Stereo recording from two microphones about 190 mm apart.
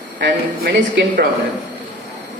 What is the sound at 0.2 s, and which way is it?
A man's voice, 60° right (ahead or behind).